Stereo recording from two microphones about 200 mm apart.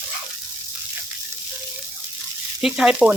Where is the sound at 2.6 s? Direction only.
5° right (ahead or behind).